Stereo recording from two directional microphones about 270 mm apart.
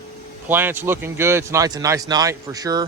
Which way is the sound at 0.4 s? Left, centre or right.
Centre.